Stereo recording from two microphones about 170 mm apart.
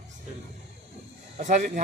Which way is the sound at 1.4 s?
45° right (ahead or behind).